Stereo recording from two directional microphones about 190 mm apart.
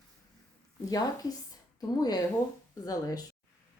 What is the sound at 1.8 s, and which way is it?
A woman's voice, 20° left (ahead or behind).